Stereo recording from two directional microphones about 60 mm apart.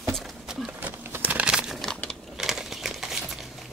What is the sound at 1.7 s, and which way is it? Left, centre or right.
Crumpling, centre.